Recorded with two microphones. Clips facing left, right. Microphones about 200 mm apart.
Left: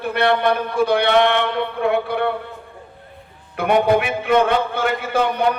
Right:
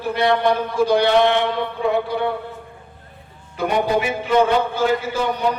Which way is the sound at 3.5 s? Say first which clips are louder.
Left 3 dB; 60° left (ahead or behind).